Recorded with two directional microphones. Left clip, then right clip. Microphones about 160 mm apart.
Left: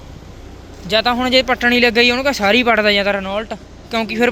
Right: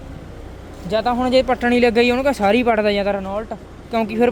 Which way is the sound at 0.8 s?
Centre (ahead or behind).